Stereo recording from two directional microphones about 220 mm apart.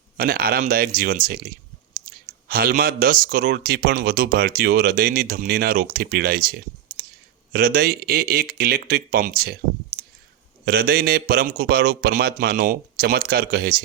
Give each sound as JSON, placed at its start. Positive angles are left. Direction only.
{"t": 0.2, "sound": "speech", "side_deg": -40}